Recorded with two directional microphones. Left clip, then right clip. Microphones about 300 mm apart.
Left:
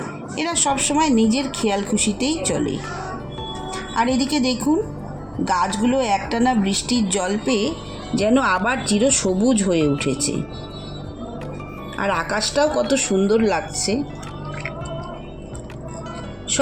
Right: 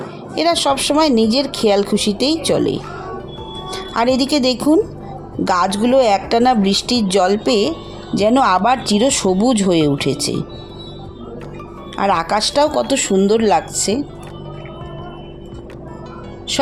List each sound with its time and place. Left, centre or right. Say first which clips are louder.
0.3 s a woman's voice: right 6 dB; right
12.0 s a woman's voice: right 6 dB; right